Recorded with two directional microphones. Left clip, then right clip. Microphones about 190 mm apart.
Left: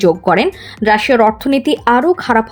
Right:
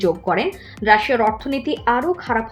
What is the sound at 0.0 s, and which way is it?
Speech, 40° left (ahead or behind).